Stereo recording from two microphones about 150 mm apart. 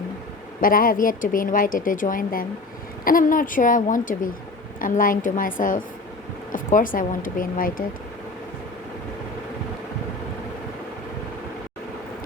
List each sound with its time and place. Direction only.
0.6 s a woman's voice: 70° left (ahead or behind)